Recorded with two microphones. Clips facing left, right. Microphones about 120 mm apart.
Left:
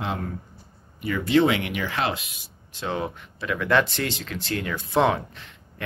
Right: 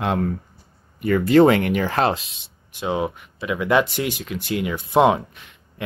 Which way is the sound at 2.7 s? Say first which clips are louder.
Right 5 dB; 15° right (ahead or behind).